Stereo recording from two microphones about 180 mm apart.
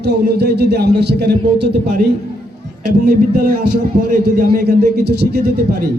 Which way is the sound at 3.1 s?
45° right (ahead or behind).